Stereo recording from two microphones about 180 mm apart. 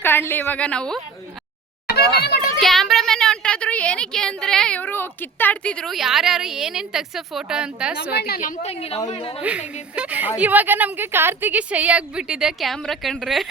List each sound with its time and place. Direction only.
0.0 s a woman's voice: 10° left (ahead or behind)
2.6 s a woman's voice: centre (ahead or behind)
8.1 s a woman's voice: 60° left (ahead or behind)
8.7 s a woman's voice: 35° left (ahead or behind)
9.4 s a woman's voice: 5° right (ahead or behind)